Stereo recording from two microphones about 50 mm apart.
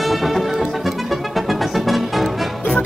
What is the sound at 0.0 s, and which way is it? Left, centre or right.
Music, centre.